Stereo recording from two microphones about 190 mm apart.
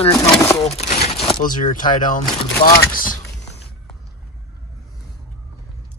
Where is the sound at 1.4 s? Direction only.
45° left (ahead or behind).